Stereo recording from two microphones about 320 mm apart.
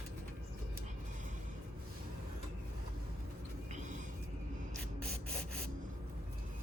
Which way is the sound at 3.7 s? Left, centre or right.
Right.